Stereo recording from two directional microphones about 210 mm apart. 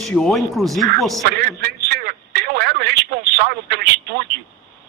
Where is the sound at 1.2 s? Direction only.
50° right (ahead or behind).